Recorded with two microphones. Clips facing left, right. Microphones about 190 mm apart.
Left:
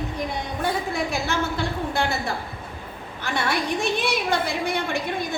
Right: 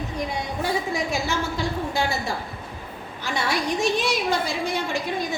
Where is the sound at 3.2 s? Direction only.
55° left (ahead or behind).